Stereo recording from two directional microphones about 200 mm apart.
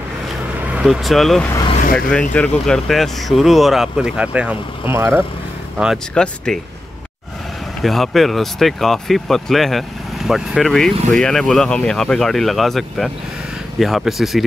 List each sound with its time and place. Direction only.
0.8 s speech: centre (ahead or behind)
5.8 s speech: centre (ahead or behind)
7.8 s speech: centre (ahead or behind)